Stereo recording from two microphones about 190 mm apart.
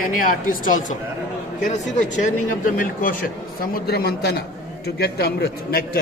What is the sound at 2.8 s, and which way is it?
A man's voice, 50° left (ahead or behind).